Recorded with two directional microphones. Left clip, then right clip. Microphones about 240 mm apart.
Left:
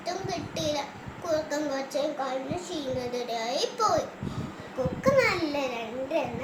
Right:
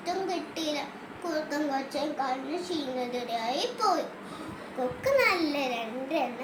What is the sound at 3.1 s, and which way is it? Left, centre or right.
Speech, centre.